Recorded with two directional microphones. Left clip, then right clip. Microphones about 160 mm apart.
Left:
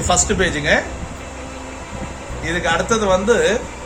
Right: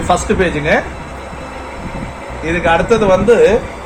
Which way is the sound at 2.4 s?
5° left (ahead or behind).